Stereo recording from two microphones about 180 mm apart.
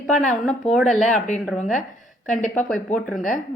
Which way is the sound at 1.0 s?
40° left (ahead or behind).